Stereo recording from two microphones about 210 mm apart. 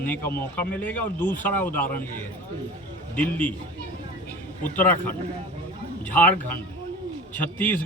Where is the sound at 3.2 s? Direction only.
5° left (ahead or behind).